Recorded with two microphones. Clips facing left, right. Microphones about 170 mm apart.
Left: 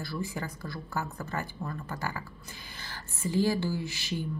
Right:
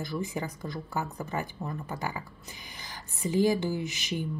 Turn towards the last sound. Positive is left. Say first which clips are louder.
# right 2 dB
turn(degrees=-20)  # may be behind; listen again after turning